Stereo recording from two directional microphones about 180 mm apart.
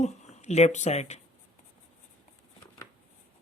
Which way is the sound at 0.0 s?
40° left (ahead or behind).